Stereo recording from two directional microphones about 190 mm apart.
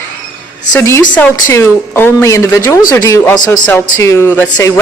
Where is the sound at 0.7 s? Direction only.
10° left (ahead or behind).